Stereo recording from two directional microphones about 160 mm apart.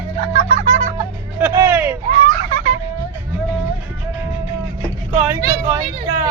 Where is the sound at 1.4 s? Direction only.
10° right (ahead or behind).